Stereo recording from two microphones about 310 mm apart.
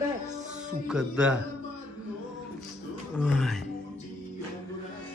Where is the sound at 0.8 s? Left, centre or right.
Centre.